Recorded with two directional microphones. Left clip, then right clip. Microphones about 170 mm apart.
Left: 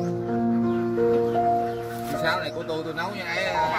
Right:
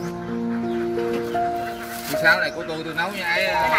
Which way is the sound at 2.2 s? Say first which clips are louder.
Right 8 dB; 35° left (ahead or behind).